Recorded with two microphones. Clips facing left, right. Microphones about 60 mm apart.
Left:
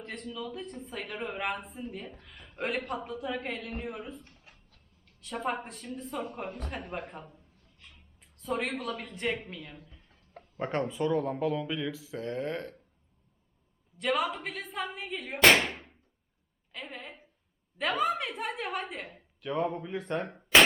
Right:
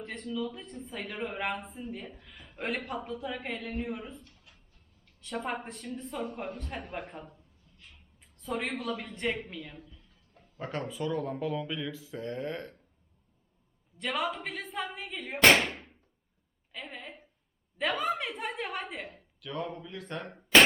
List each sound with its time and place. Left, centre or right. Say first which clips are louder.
0.0 s a man's voice: right 3 dB; centre
4.2 s a sound: left 1 dB; left
5.2 s a man's voice: left 1 dB; centre
9.8 s a sound: right 1 dB; left
10.6 s speech: left 4 dB; centre
11.2 s a man's voice: left 3 dB; centre
14.0 s a man's voice: left 3 dB; centre